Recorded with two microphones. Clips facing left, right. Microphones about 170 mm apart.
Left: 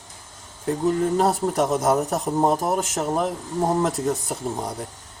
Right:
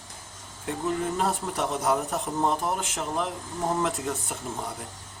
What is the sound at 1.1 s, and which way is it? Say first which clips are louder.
Speech: left 8 dB; 40° left (ahead or behind).